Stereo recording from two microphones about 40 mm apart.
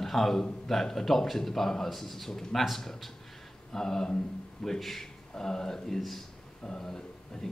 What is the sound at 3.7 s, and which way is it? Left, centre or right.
Speech, centre.